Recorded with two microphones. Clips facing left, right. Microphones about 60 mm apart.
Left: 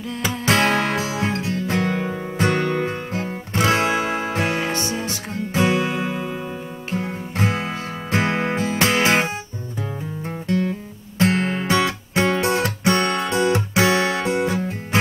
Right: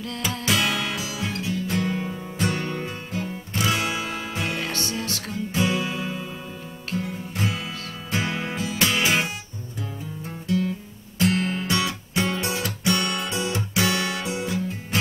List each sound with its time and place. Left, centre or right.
0.5 s music: left
1.5 s music: left
3.5 s music: left
4.6 s music: left
11.1 s music: left
12.8 s music: left
13.3 s music: left